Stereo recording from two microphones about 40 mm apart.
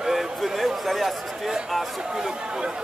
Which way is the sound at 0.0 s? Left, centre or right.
Centre.